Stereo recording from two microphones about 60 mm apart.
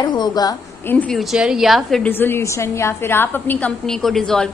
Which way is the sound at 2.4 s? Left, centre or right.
Left.